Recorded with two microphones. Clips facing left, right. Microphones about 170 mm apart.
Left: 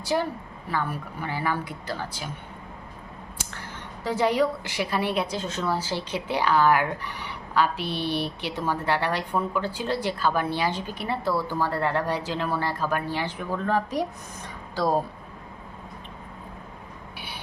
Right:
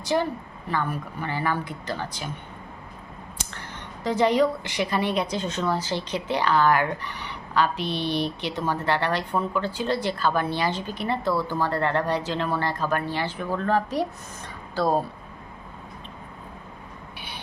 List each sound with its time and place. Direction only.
0.0 s a woman's voice: 10° left (ahead or behind)
3.3 s a woman's voice: 5° left (ahead or behind)
17.2 s a sound: 10° left (ahead or behind)